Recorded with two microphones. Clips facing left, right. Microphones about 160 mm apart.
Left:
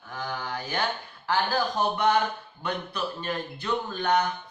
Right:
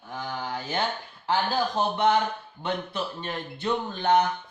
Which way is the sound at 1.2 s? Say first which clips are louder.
Right 1 dB; 25° right (ahead or behind).